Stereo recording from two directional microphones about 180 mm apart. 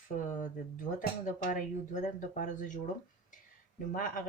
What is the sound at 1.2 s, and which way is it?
Speech, 45° left (ahead or behind).